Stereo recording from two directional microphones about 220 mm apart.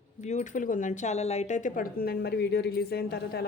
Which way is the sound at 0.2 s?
30° left (ahead or behind).